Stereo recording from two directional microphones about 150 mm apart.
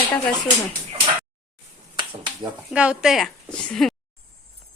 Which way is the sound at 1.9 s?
30° right (ahead or behind).